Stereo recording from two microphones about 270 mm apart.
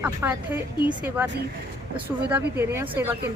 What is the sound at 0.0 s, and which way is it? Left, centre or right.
Speech, centre.